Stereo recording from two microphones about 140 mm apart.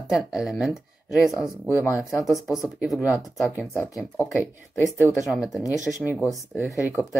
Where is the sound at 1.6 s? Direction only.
20° left (ahead or behind).